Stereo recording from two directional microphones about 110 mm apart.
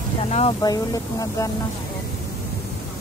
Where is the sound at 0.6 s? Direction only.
35° left (ahead or behind).